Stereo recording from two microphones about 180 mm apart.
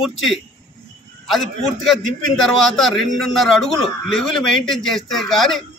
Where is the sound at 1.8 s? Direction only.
Centre (ahead or behind).